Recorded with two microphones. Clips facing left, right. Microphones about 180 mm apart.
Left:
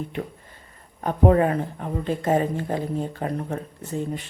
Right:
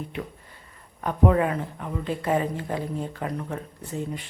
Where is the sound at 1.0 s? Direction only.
40° left (ahead or behind).